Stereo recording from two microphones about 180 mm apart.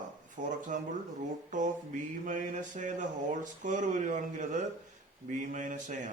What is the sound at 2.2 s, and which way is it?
Speech, 45° right (ahead or behind).